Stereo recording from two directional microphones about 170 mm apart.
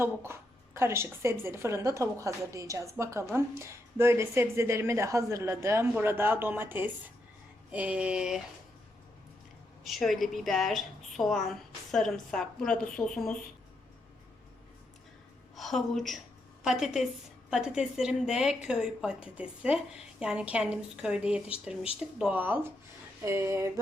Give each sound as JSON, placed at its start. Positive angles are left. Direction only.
{"t": 0.0, "sound": "a woman's voice", "side_deg": -15}
{"t": 9.8, "sound": "a woman's voice", "side_deg": 0}
{"t": 15.5, "sound": "a woman's voice", "side_deg": 0}